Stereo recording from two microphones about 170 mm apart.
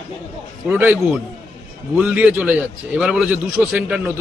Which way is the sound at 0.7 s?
10° right (ahead or behind).